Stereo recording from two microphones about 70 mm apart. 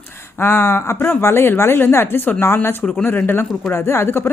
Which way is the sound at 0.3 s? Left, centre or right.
Left.